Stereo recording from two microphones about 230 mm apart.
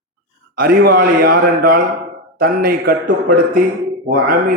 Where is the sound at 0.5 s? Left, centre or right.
Right.